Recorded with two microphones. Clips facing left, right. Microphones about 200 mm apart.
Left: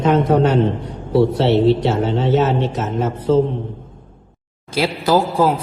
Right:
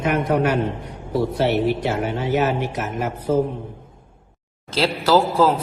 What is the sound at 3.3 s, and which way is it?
Speech, 90° left.